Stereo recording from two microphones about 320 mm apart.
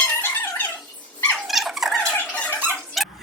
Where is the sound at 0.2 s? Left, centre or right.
Centre.